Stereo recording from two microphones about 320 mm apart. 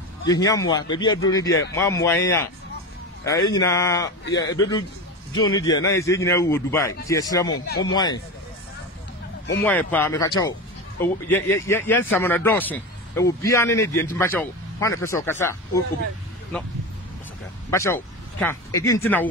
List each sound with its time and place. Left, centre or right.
0.3 s a man's voice: centre
1.5 s speech: left
1.9 s a man's voice: centre
9.7 s a man's voice: centre